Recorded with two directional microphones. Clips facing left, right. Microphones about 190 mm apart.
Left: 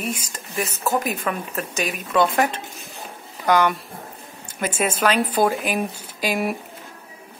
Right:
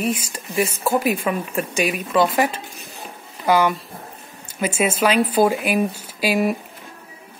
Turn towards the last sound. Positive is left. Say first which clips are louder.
# right 3 dB
turn(degrees=-10)  # may be behind; listen again after turning